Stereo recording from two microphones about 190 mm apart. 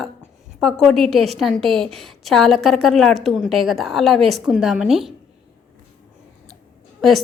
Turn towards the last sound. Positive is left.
turn(degrees=0)  # may be behind; listen again after turning